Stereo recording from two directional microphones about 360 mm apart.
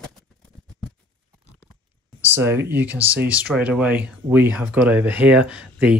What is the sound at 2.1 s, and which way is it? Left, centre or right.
Speech, centre.